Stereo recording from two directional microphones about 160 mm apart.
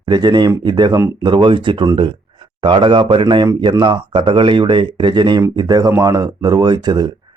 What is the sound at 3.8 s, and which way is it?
Speech, 30° right (ahead or behind).